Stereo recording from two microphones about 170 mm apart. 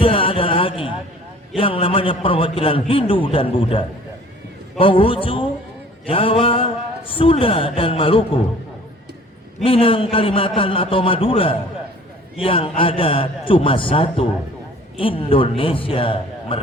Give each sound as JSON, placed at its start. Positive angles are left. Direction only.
{"t": 0.0, "sound": "a sound", "side_deg": 30}
{"t": 1.5, "sound": "a man's voice", "side_deg": 30}
{"t": 9.6, "sound": "a man's voice", "side_deg": 30}